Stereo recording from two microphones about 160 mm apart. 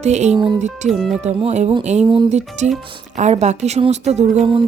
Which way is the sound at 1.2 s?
40° right (ahead or behind).